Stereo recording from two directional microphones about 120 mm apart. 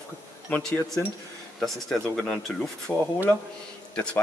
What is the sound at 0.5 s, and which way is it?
Speech, 5° left (ahead or behind).